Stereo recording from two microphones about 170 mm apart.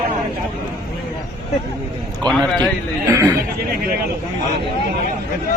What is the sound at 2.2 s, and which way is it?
Speech, 5° left (ahead or behind).